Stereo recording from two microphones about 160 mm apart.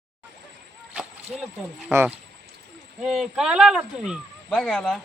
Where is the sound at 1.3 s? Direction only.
Centre (ahead or behind).